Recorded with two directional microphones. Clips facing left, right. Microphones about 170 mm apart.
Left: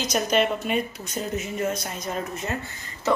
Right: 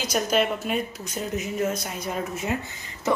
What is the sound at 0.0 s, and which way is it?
Speech, 5° right (ahead or behind).